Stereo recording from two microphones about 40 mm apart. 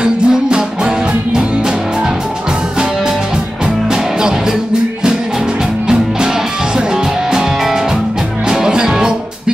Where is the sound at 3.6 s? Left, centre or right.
Centre.